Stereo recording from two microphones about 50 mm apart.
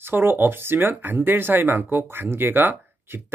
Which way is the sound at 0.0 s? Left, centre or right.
Right.